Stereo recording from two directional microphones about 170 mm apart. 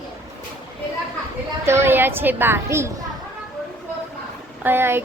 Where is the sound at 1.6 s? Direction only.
15° right (ahead or behind).